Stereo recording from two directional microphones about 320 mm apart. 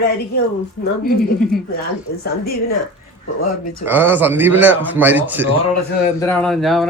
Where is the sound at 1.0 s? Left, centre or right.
Left.